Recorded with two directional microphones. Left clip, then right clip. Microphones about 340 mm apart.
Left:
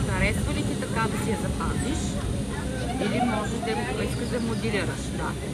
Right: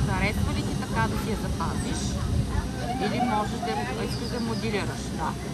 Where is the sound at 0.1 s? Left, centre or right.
Right.